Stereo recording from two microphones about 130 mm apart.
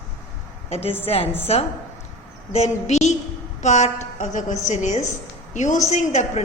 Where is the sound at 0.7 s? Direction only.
55° left (ahead or behind).